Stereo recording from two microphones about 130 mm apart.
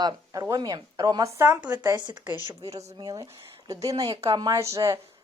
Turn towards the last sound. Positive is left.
turn(degrees=-25)  # may be behind; listen again after turning